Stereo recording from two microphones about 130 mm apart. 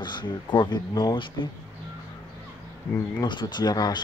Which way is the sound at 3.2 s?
35° left (ahead or behind).